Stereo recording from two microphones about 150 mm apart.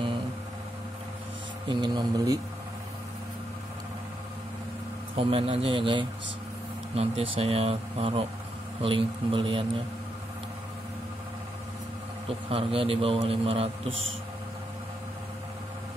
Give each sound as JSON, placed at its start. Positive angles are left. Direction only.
{"t": 1.7, "sound": "speech", "side_deg": -30}
{"t": 5.1, "sound": "a man's voice", "side_deg": -40}
{"t": 12.3, "sound": "a man's voice", "side_deg": -40}